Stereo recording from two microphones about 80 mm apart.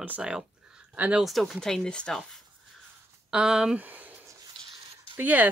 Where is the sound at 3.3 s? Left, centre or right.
Centre.